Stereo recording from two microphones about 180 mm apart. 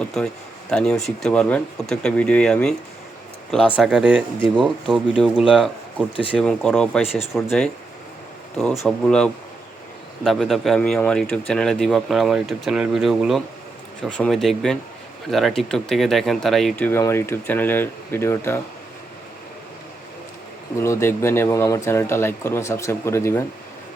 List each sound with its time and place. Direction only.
0.7 s speech: 5° left (ahead or behind)
3.8 s speech: 5° right (ahead or behind)
7.0 s speech: 35° left (ahead or behind)
8.5 s speech: centre (ahead or behind)
20.8 s speech: 15° left (ahead or behind)